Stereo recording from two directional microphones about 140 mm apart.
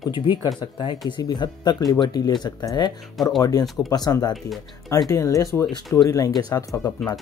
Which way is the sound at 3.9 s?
30° left (ahead or behind).